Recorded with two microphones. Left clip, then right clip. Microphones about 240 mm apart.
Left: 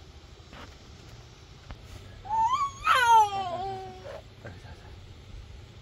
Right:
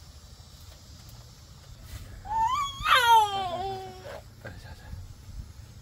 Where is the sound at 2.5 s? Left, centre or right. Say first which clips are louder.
Right 2 dB; centre.